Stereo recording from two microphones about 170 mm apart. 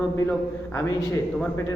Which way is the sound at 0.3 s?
15° left (ahead or behind).